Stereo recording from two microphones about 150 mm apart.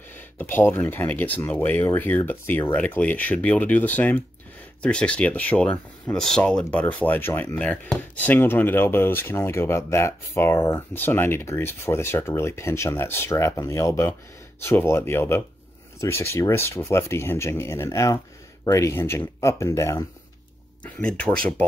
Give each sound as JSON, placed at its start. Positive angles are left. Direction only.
{"t": 0.1, "sound": "speech", "side_deg": 10}
{"t": 20.8, "sound": "speech", "side_deg": 5}